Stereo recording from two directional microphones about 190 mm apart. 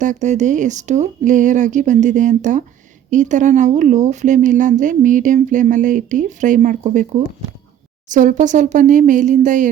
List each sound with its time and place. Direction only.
0.0 s speech: 40° right (ahead or behind)